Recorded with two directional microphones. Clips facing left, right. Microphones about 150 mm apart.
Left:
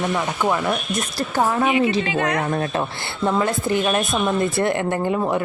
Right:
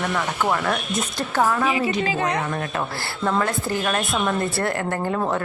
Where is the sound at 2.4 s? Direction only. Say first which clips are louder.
Left 4 dB; 35° left (ahead or behind).